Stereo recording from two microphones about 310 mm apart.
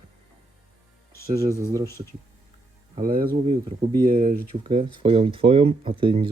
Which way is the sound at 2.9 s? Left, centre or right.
Right.